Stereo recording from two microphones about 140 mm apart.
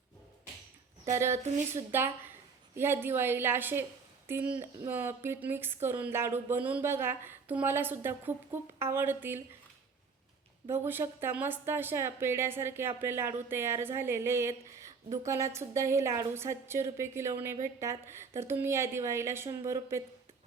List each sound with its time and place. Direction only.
1.1 s a woman's voice: 20° right (ahead or behind)
10.7 s a woman's voice: 15° right (ahead or behind)